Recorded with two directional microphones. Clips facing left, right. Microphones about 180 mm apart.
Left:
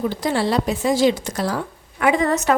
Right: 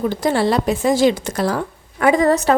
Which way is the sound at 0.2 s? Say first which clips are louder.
Right 4 dB; 50° right (ahead or behind).